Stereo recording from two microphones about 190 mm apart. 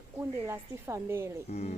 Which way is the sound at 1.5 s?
35° left (ahead or behind).